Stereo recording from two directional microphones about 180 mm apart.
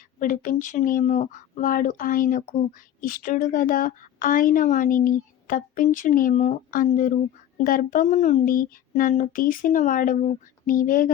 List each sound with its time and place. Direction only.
0.2 s a woman's voice: 45° left (ahead or behind)